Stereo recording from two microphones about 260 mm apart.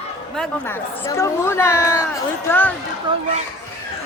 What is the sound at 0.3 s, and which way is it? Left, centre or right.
Speech, centre.